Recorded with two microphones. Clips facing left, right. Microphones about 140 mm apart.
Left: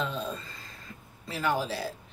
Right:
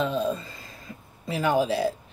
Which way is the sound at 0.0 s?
15° right (ahead or behind).